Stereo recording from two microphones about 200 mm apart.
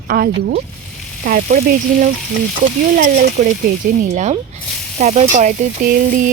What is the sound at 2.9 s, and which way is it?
Speech, 50° right (ahead or behind).